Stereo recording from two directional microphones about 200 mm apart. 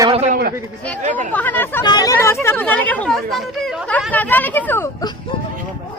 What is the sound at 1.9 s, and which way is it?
Speech, 20° left (ahead or behind).